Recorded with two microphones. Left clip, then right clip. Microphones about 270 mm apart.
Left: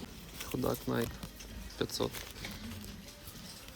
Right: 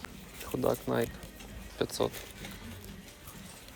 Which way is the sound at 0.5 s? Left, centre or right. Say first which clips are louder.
Right 5 dB; centre.